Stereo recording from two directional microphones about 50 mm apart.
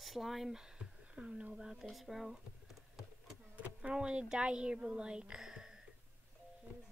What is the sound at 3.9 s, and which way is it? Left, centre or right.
Speech, centre.